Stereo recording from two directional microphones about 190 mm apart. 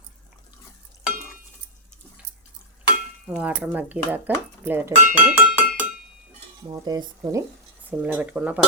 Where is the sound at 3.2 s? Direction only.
5° right (ahead or behind).